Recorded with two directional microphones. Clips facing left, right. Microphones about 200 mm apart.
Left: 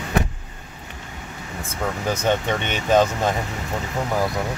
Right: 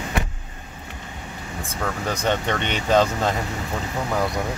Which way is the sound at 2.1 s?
10° left (ahead or behind).